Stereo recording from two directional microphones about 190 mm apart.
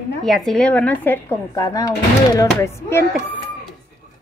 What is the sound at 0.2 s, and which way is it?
Speech, centre (ahead or behind).